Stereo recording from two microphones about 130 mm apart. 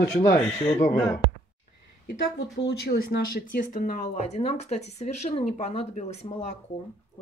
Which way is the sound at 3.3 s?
90° left.